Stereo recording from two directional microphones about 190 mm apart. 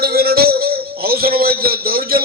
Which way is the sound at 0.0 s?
55° right (ahead or behind).